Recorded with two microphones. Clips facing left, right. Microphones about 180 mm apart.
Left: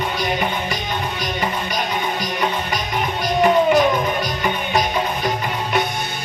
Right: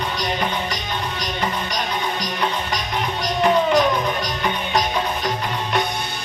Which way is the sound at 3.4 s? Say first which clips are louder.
Left 2 dB; 5° left (ahead or behind).